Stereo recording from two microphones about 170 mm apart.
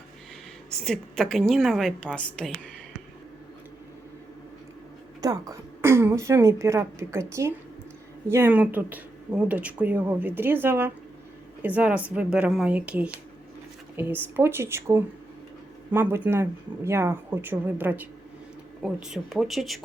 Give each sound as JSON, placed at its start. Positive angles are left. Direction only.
{"t": 0.7, "sound": "a woman's voice", "side_deg": 5}
{"t": 5.2, "sound": "a woman's voice", "side_deg": -20}